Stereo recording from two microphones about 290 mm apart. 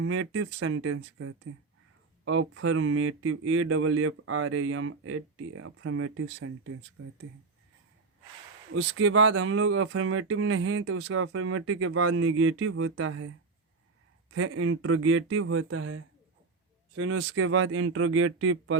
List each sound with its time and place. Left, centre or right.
0.0 s speech: right
8.7 s speech: right
14.3 s speech: right